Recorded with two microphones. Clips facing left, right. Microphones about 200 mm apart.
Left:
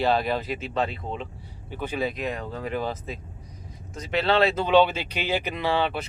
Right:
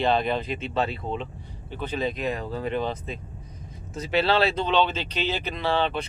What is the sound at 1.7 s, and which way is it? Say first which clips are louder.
Speech: even; 10° left (ahead or behind).